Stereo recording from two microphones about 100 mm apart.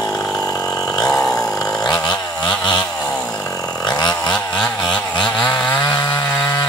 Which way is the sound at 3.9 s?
45° left (ahead or behind).